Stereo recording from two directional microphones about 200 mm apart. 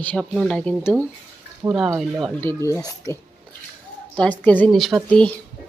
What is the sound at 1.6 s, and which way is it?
Speech, 15° right (ahead or behind).